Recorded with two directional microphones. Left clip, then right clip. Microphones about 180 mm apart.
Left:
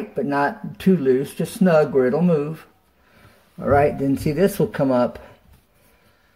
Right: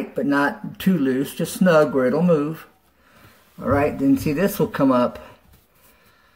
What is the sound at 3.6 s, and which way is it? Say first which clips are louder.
Speech: left 3 dB; 25° left (ahead or behind).